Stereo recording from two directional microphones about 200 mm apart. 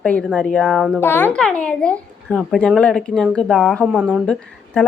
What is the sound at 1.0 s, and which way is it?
Speech, 10° left (ahead or behind).